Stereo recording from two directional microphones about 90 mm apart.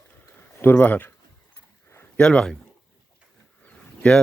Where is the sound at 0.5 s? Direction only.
20° left (ahead or behind).